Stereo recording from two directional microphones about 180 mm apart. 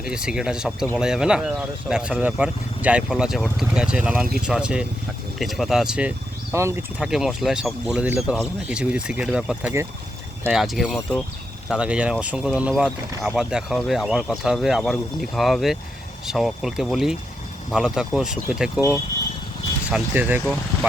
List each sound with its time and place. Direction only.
0.0 s speech: 5° right (ahead or behind)
19.9 s speech: 10° right (ahead or behind)